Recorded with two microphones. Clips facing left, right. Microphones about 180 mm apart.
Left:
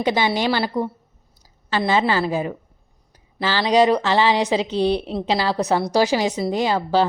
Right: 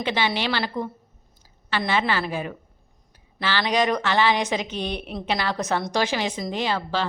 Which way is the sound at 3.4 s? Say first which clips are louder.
Left 6 dB; 35° left (ahead or behind).